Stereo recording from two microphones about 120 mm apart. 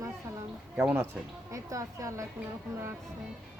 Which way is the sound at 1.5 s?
25° right (ahead or behind).